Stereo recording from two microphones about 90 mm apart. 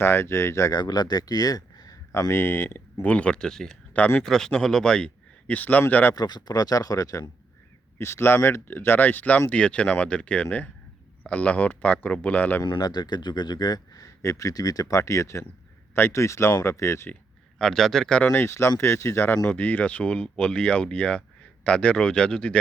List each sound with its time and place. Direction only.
0.0 s speech: 30° left (ahead or behind)
0.8 s speech: 50° left (ahead or behind)
2.1 s speech: 30° left (ahead or behind)
6.1 s speech: 50° left (ahead or behind)
7.9 s speech: 30° left (ahead or behind)
12.8 s speech: 50° left (ahead or behind); by 17.1 s 30° left (ahead or behind)
17.6 s speech: 5° left (ahead or behind)
18.3 s speech: 30° left (ahead or behind)
19.4 s speech: 15° left (ahead or behind)